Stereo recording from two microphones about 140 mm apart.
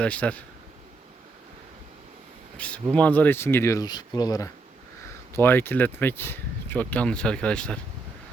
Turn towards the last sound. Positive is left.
turn(degrees=5)  # may be behind; listen again after turning